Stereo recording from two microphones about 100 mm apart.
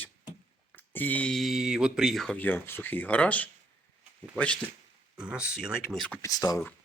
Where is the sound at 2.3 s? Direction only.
20° left (ahead or behind).